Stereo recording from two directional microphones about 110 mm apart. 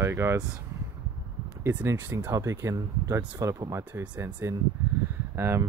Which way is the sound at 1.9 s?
20° right (ahead or behind).